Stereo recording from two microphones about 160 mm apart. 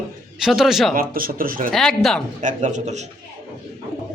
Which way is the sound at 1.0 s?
65° right (ahead or behind).